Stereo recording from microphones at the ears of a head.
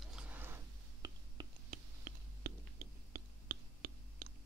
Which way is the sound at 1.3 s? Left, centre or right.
Right.